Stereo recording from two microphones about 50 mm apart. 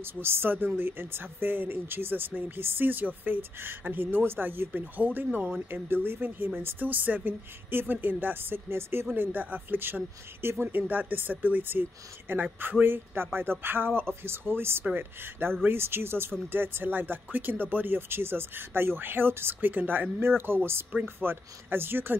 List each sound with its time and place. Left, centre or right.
0.0 s speech: right
9.1 s speech: right
10.8 s speech: right
20.2 s speech: right